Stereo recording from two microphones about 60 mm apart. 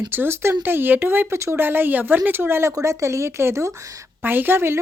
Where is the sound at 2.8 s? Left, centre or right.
Right.